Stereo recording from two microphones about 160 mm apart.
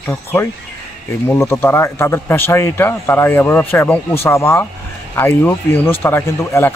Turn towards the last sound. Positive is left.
turn(degrees=15)  # may be behind; listen again after turning